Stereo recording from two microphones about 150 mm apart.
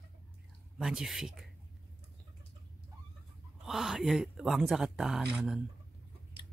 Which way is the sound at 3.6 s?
Centre (ahead or behind).